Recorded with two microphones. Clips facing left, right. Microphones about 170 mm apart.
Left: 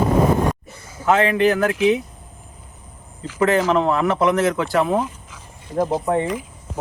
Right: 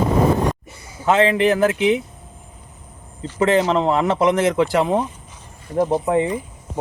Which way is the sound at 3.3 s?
25° right (ahead or behind).